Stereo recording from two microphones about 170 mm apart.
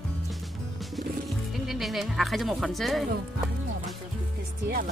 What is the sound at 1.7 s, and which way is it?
Speech, centre (ahead or behind).